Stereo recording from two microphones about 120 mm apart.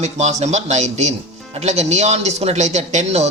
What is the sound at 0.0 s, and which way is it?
Speech, 70° right (ahead or behind).